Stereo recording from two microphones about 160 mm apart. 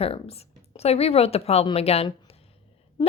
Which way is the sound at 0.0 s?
40° left (ahead or behind).